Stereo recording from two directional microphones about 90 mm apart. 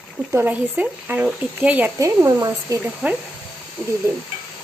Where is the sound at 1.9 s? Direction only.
40° right (ahead or behind).